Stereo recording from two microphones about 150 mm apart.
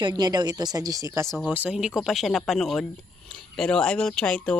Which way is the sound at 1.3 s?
Centre (ahead or behind).